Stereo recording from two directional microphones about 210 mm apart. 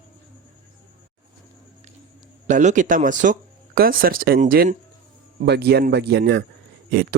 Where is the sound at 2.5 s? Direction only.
35° right (ahead or behind).